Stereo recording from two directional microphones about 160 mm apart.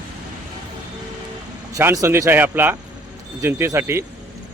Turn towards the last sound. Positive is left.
turn(degrees=-15)  # may be behind; listen again after turning